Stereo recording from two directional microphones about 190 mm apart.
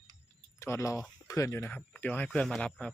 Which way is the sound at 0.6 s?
15° left (ahead or behind).